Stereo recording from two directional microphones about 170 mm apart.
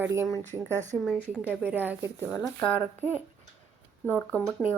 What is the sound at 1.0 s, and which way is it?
Speech, centre (ahead or behind).